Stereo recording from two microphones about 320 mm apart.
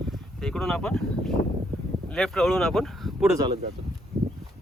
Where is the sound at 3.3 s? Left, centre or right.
Centre.